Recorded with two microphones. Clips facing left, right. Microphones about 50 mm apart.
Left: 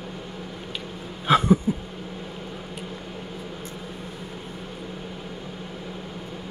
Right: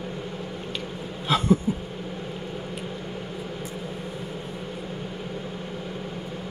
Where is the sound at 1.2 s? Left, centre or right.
Left.